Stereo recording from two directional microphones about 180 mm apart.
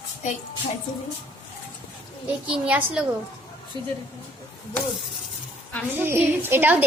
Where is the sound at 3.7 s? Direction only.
25° right (ahead or behind).